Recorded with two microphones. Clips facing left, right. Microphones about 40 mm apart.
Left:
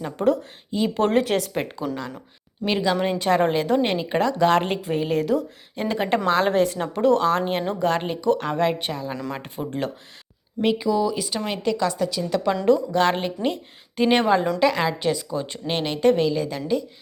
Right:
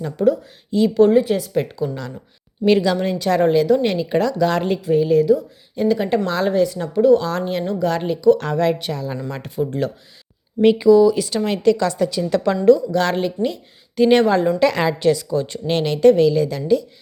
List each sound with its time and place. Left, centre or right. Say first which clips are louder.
0.2 s a woman's voice: right 4 dB; left
0.7 s speech: right 6 dB; centre
1.1 s speech: right 4 dB; left
1.5 s a woman's voice: right 6 dB; left
2.6 s speech: right 6 dB; centre
3.1 s a woman's voice: right 4 dB; left
5.7 s a woman's voice: right 5 dB; left
7.3 s a woman's voice: even; left
8.5 s speech: right 3 dB; left
10.6 s a woman's voice: right 9 dB; centre
12.6 s speech: right 5 dB; left
14.1 s speech: right 4 dB; centre
14.6 s speech: right 4 dB; centre